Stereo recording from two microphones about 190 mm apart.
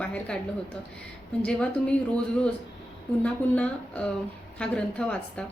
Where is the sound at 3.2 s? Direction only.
5° left (ahead or behind).